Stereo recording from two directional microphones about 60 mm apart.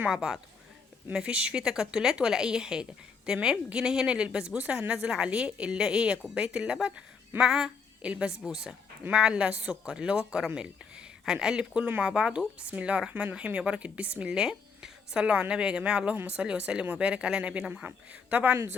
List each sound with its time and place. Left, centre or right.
0.1 s a woman's voice: centre